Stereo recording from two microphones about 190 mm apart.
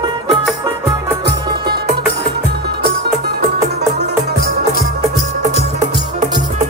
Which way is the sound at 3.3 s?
60° right (ahead or behind).